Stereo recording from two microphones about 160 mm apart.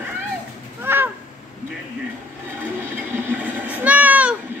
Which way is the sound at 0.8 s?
15° right (ahead or behind).